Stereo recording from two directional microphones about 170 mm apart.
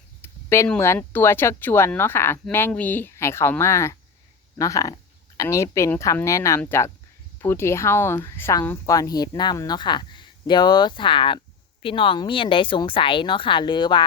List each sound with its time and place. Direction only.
0.2 s speech: 15° left (ahead or behind)